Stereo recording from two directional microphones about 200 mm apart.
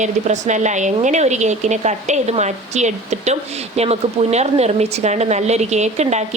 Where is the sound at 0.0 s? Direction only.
35° right (ahead or behind).